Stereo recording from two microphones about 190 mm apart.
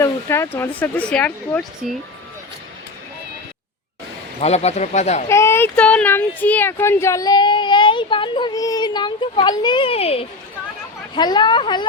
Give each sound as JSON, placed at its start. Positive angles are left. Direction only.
{"t": 0.0, "sound": "speech", "side_deg": 15}
{"t": 4.4, "sound": "speech", "side_deg": 35}
{"t": 5.3, "sound": "speech", "side_deg": 15}